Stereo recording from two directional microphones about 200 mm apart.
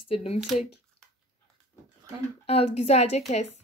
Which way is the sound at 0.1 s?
30° left (ahead or behind).